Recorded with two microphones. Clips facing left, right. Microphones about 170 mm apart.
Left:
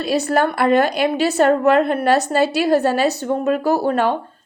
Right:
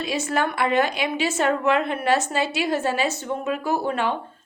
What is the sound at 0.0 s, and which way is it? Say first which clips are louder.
A woman's voice: left 6 dB; 35° left (ahead or behind).